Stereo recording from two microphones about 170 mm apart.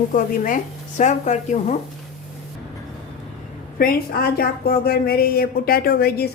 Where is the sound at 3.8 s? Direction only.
60° left (ahead or behind).